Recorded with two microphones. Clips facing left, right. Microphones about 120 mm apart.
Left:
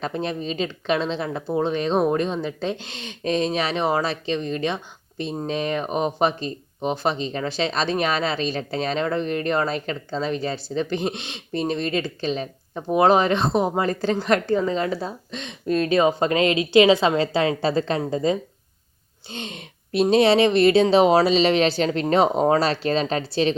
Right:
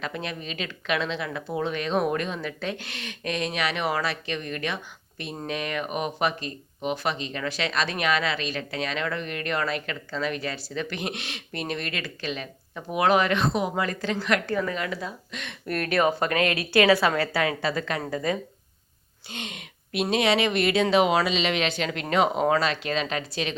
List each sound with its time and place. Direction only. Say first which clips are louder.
0.0 s speech: left 6 dB; 30° left (ahead or behind)